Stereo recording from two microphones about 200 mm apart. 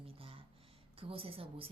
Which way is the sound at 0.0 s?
30° right (ahead or behind).